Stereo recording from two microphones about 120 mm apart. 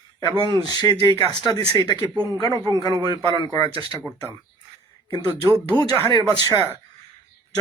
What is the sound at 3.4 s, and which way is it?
Speech, 30° left (ahead or behind).